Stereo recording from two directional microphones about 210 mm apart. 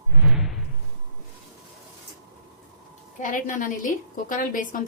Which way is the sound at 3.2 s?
40° left (ahead or behind).